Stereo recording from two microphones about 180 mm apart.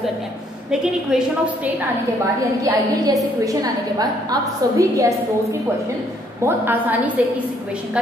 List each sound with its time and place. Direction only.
0.7 s a woman's voice: 5° right (ahead or behind)
2.6 s a woman's voice: 20° right (ahead or behind)
6.4 s a woman's voice: 10° right (ahead or behind)